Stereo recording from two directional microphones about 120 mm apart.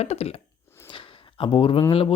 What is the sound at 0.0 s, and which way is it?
Speech, 60° left (ahead or behind).